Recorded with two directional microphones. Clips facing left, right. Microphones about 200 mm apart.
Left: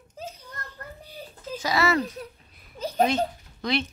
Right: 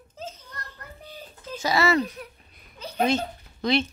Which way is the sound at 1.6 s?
25° right (ahead or behind).